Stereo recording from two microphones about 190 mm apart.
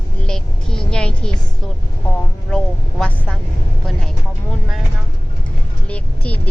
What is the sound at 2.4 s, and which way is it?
Vehicle, 5° left (ahead or behind).